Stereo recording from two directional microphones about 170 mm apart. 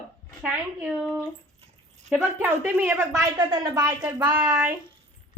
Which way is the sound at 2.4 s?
10° right (ahead or behind).